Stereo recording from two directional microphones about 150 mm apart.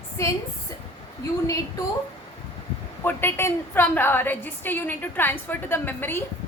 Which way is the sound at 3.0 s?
15° left (ahead or behind).